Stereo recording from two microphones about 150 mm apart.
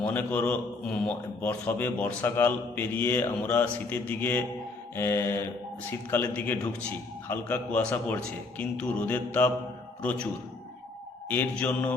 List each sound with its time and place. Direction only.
0.0 s a man's voice: 10° left (ahead or behind)
11.3 s a man's voice: 10° left (ahead or behind)